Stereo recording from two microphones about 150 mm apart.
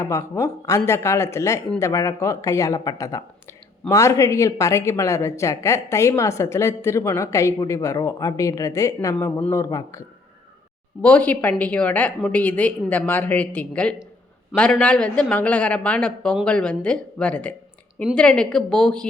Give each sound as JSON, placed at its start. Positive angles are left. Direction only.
{"t": 0.0, "sound": "speech", "side_deg": 20}
{"t": 11.0, "sound": "a woman's voice", "side_deg": 10}